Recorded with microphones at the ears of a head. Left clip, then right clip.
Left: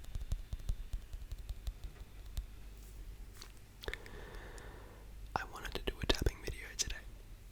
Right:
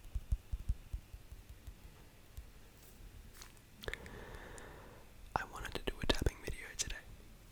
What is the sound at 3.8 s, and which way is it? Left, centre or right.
Whispering, centre.